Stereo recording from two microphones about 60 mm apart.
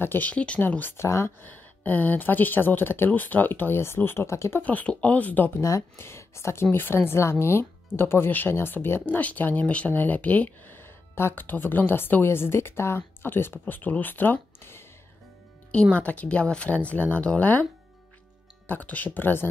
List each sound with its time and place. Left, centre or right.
0.0 s speech: left
0.3 s speech: left
0.6 s speech: left
0.9 s speech: left
1.4 s speech: left
4.6 s speech: left
5.6 s speech: left
5.9 s speech: left
9.0 s speech: left
15.7 s speech: centre
18.7 s speech: left